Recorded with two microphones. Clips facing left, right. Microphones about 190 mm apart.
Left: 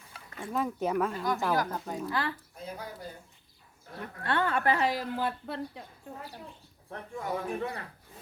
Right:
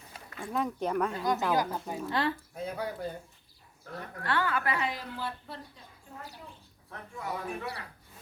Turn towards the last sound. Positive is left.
turn(degrees=35)  # may be behind; listen again after turning